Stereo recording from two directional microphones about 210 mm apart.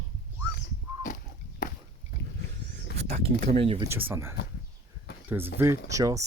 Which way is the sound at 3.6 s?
25° right (ahead or behind).